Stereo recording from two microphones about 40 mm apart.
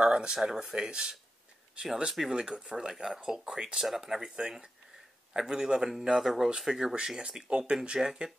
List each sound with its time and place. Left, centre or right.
0.0 s speech: right
8.0 s speech: centre